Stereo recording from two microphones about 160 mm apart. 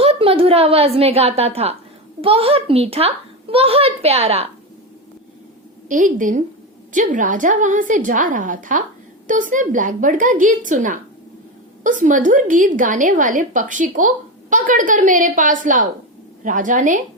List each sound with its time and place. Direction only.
0.0 s a woman's voice: 35° right (ahead or behind)
5.9 s a woman's voice: 55° right (ahead or behind)